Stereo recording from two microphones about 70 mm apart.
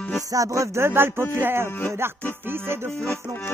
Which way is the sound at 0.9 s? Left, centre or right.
Right.